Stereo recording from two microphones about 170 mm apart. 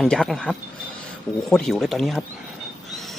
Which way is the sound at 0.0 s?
Centre (ahead or behind).